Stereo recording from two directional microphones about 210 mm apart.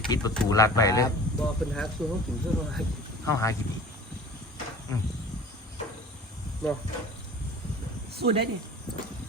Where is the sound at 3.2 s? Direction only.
15° left (ahead or behind).